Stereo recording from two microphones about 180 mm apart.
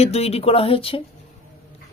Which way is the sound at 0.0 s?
35° left (ahead or behind).